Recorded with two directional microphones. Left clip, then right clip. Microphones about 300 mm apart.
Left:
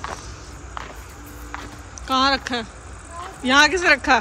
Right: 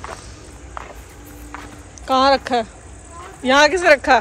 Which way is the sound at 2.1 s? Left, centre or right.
Centre.